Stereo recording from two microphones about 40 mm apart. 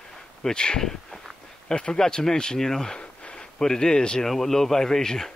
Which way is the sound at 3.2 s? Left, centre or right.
Left.